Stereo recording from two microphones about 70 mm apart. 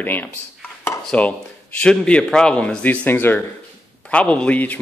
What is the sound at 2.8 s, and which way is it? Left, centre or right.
Speech, left.